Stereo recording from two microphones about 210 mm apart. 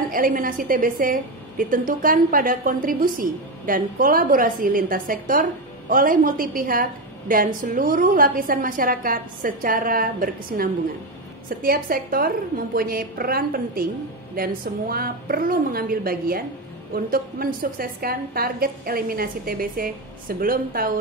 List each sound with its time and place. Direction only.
0.1 s a woman's voice: 40° right (ahead or behind)